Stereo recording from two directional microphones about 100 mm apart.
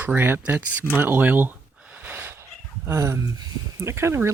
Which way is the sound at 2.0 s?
20° right (ahead or behind).